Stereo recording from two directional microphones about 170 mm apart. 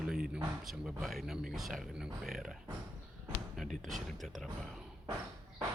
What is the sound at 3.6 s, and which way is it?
Speech, centre (ahead or behind).